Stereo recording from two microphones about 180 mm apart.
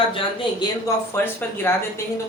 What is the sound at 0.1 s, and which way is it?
Speech, 30° left (ahead or behind).